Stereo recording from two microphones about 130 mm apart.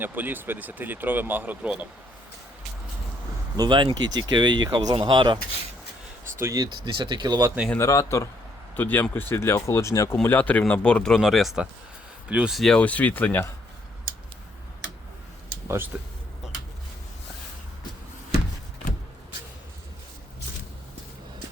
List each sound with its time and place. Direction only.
0.0 s speech: 15° right (ahead or behind)
3.6 s speech: 35° right (ahead or behind)
6.4 s speech: 25° right (ahead or behind)
7.8 s speech: 25° left (ahead or behind)
10.2 s speech: 15° left (ahead or behind)
15.6 s speech: 20° right (ahead or behind)